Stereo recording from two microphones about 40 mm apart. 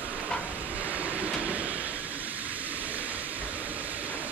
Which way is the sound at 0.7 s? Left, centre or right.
Right.